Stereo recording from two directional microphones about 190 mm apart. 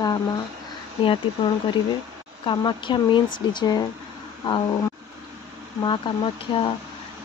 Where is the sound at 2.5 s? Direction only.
25° left (ahead or behind).